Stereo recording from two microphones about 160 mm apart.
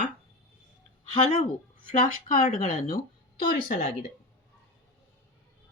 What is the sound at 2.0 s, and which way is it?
Speech, 55° left (ahead or behind).